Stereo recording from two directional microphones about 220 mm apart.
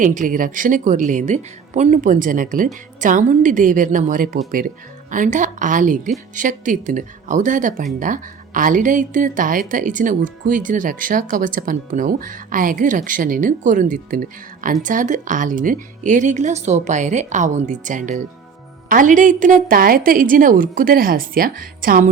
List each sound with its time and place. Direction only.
0.0 s a woman's voice: 35° right (ahead or behind)